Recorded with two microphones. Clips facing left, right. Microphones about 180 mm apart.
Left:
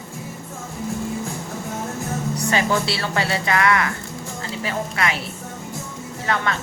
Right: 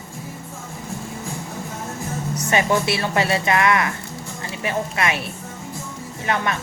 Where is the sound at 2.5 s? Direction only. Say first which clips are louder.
Right 3 dB; 20° right (ahead or behind).